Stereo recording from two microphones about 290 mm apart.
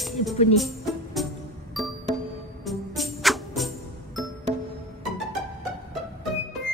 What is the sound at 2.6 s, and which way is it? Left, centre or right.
Music, centre.